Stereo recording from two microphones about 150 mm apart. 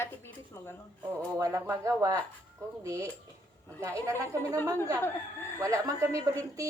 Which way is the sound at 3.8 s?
20° right (ahead or behind).